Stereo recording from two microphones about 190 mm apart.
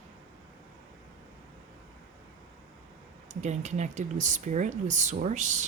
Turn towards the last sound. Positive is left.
turn(degrees=-40)  # may be behind; listen again after turning